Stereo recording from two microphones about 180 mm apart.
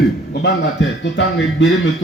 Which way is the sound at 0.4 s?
90° left.